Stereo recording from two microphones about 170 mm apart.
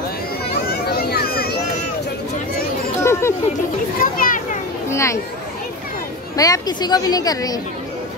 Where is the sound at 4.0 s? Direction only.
55° left (ahead or behind).